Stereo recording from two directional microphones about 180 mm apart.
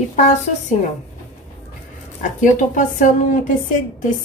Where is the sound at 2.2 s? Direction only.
45° left (ahead or behind).